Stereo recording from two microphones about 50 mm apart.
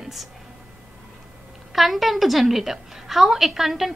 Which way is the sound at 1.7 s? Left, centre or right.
Centre.